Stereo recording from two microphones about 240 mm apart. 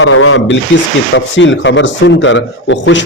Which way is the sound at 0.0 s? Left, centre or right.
Left.